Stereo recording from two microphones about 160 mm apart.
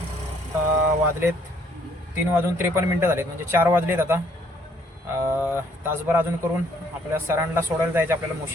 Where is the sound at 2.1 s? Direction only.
15° right (ahead or behind).